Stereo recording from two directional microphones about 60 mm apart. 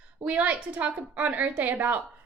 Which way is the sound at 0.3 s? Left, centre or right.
Right.